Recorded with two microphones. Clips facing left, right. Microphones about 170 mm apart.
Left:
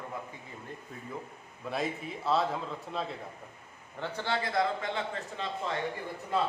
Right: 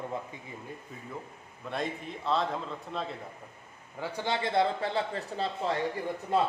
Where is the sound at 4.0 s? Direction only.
15° right (ahead or behind); by 5.7 s 35° right (ahead or behind).